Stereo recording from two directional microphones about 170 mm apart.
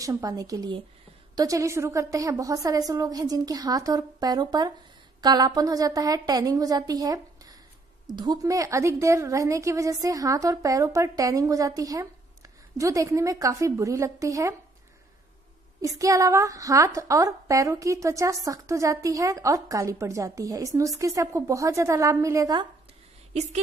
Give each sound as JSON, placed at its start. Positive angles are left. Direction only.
{"t": 0.0, "sound": "a woman's voice", "side_deg": -20}
{"t": 15.8, "sound": "a woman's voice", "side_deg": -20}